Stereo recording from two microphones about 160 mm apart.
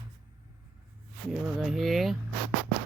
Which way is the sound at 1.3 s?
Centre (ahead or behind).